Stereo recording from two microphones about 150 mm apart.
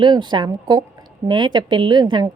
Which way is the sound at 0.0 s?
30° right (ahead or behind).